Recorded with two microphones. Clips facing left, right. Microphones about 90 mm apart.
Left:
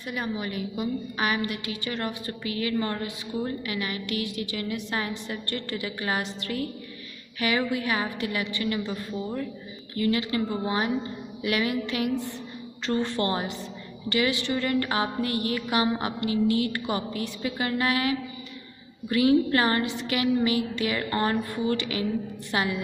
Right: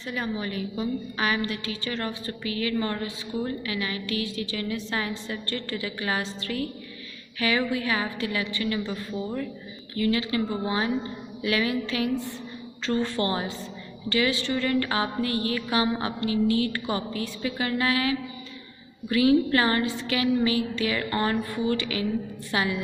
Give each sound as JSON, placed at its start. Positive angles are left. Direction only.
{"t": 0.0, "sound": "a woman's voice", "side_deg": 15}
{"t": 0.4, "sound": "music", "side_deg": 20}
{"t": 11.4, "sound": "music", "side_deg": 20}